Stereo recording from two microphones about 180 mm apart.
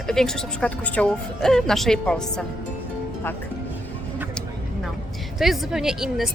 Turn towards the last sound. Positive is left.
turn(degrees=-5)  # may be behind; listen again after turning